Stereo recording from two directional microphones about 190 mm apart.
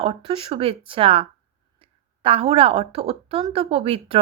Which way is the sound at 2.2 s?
30° right (ahead or behind).